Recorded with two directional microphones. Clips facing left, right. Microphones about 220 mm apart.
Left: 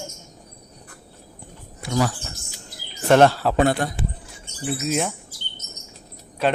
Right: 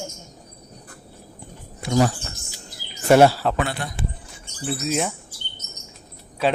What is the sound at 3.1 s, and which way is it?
Speech, 10° right (ahead or behind).